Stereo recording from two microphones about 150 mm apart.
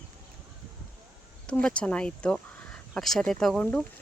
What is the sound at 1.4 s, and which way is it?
Speech, 5° left (ahead or behind).